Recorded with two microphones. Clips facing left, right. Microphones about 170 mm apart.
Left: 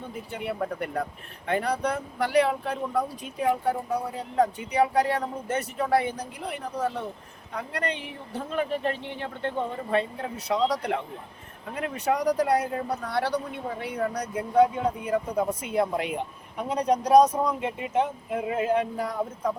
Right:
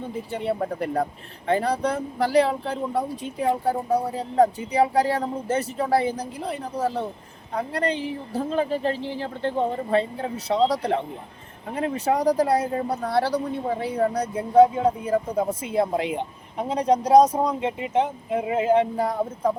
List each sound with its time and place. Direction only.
0.0 s speech: 30° right (ahead or behind)